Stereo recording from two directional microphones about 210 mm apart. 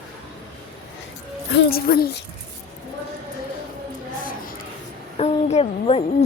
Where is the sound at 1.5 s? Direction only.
45° left (ahead or behind).